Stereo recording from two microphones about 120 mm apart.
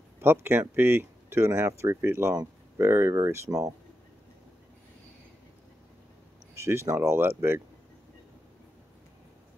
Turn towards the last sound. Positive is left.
turn(degrees=-20)  # may be behind; listen again after turning